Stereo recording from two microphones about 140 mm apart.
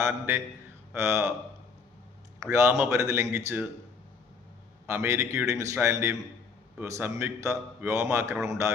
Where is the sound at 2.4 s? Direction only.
20° right (ahead or behind).